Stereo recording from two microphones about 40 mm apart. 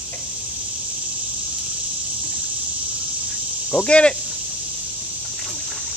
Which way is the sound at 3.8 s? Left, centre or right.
Left.